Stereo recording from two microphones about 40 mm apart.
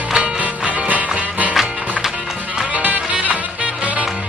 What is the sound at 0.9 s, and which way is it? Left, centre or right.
Music, right.